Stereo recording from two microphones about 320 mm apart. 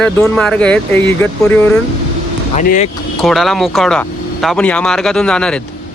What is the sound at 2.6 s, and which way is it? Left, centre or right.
Speech, left.